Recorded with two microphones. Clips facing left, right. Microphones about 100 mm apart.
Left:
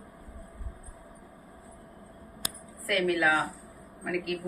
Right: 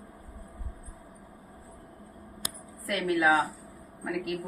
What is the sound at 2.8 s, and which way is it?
Speech, 25° right (ahead or behind).